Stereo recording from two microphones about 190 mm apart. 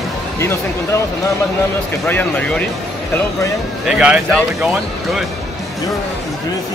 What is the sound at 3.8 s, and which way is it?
Speech, 5° right (ahead or behind).